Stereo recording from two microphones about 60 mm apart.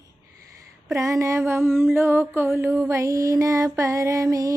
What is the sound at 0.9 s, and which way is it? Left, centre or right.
Mantra, right.